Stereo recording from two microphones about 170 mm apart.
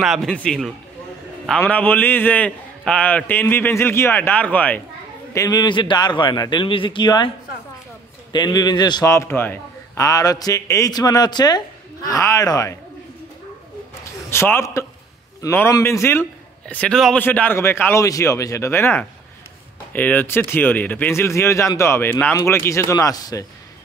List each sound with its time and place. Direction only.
0.0 s a man's voice: centre (ahead or behind)
5.3 s a man's voice: 20° left (ahead or behind)
14.3 s a man's voice: 15° left (ahead or behind)